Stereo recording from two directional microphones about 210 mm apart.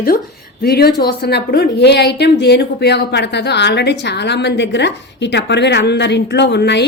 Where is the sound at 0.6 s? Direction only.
50° left (ahead or behind).